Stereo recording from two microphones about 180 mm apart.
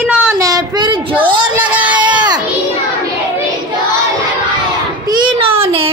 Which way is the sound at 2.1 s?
25° right (ahead or behind).